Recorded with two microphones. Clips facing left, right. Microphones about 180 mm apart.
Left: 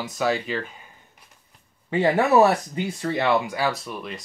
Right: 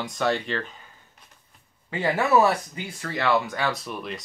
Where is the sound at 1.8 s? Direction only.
25° left (ahead or behind).